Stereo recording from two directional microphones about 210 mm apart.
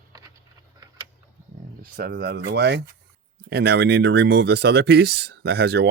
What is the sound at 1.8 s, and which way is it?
Speech, 45° right (ahead or behind).